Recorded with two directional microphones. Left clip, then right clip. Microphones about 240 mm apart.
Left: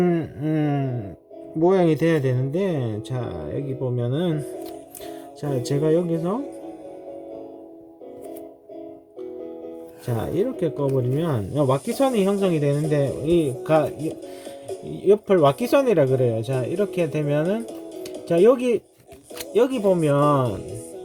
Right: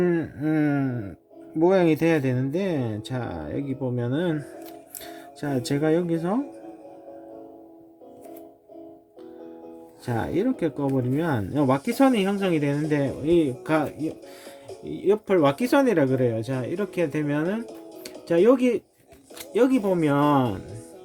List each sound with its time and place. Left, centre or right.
0.0 s a sound: centre
1.5 s speech: right
5.4 s speech: right
10.3 s speech: right
15.0 s speech: right